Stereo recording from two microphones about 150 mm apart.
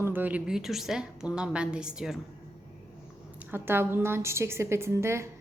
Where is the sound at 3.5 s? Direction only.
15° right (ahead or behind).